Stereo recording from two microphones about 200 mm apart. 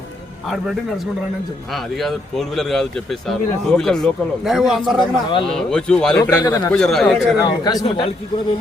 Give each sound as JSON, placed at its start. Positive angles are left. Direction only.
{"t": 0.4, "sound": "speech", "side_deg": 0}
{"t": 6.3, "sound": "speech", "side_deg": 15}
{"t": 6.7, "sound": "speech", "side_deg": 0}
{"t": 7.3, "sound": "a man's voice", "side_deg": 20}